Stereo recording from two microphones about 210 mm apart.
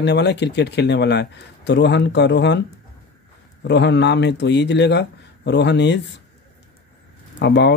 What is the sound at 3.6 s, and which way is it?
Speech, 55° left (ahead or behind).